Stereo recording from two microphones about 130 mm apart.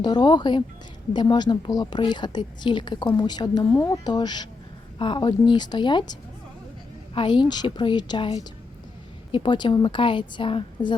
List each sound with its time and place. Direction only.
0.0 s a woman's voice: 35° left (ahead or behind)